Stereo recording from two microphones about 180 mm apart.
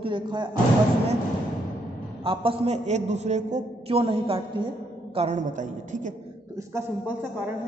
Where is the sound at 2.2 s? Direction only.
30° right (ahead or behind).